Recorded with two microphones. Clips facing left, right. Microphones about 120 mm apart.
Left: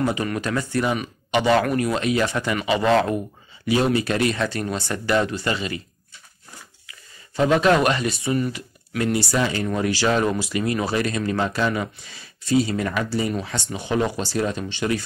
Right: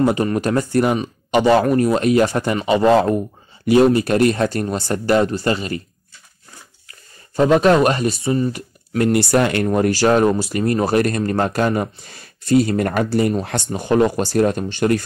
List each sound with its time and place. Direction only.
0.0 s speech: 40° right (ahead or behind)
6.9 s speech: 40° right (ahead or behind)
8.5 s speech: 50° right (ahead or behind)
9.8 s speech: 45° right (ahead or behind)